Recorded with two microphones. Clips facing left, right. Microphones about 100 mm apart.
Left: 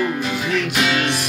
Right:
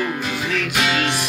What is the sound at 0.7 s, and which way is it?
Music, 20° right (ahead or behind).